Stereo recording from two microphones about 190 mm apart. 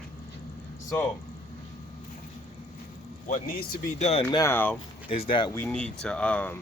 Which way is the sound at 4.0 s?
30° left (ahead or behind).